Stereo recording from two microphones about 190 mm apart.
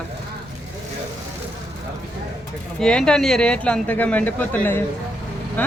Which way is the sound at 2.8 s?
5° left (ahead or behind).